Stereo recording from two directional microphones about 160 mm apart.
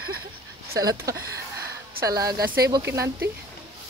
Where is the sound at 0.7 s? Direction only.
20° right (ahead or behind).